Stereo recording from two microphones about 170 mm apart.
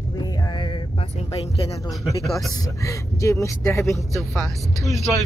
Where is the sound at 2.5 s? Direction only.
20° left (ahead or behind).